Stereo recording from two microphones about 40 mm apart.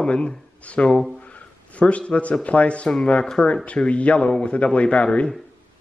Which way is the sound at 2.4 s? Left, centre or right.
Left.